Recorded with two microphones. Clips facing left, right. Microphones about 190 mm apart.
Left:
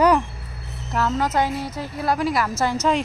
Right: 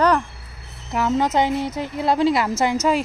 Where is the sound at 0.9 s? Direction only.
20° right (ahead or behind).